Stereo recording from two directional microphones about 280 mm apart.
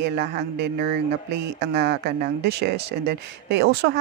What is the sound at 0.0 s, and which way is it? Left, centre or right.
Speech, right.